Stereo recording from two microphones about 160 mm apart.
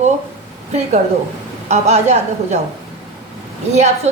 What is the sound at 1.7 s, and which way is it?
Speech, 45° right (ahead or behind).